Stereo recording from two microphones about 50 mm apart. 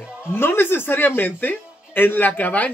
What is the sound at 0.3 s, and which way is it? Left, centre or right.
Speech, left.